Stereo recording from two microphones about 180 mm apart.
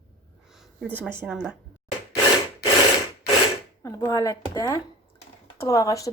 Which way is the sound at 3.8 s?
15° left (ahead or behind).